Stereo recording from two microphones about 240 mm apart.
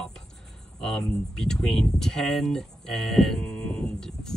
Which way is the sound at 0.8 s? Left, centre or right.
Centre.